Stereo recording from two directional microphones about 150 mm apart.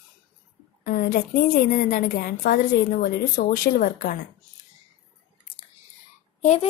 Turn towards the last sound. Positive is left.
turn(degrees=45)  # may be behind; listen again after turning